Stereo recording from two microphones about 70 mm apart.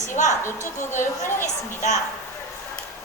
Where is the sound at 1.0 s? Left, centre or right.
Left.